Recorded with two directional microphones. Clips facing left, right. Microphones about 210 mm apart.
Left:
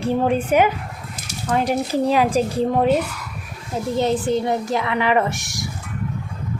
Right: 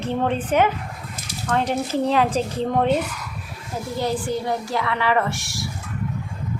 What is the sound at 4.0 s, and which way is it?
A woman's voice, 20° left (ahead or behind).